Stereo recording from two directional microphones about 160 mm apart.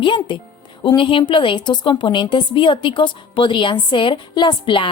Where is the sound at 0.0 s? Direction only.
30° left (ahead or behind).